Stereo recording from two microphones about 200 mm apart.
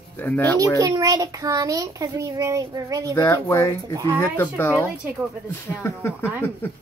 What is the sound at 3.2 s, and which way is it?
Speech, 15° left (ahead or behind).